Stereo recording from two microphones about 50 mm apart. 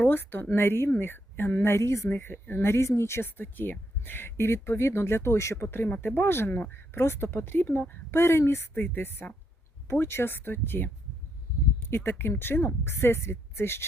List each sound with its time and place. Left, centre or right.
0.0 s speech: left
1.5 s speech: left
2.0 s speech: left
3.3 s speech: left
5.6 s speech: left
8.2 s speech: left
8.7 s speech: left